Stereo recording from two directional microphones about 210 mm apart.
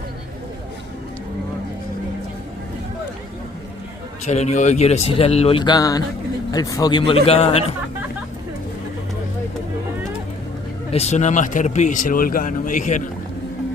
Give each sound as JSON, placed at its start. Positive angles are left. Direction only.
{"t": 4.3, "sound": "a man's voice", "side_deg": 35}
{"t": 10.9, "sound": "speech", "side_deg": 30}